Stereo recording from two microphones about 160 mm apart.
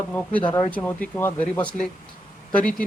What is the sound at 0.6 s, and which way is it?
Speech, 10° left (ahead or behind).